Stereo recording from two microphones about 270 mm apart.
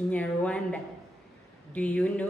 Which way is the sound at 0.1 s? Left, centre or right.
Centre.